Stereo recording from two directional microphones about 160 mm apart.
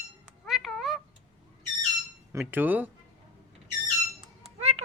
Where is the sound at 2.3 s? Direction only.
10° right (ahead or behind).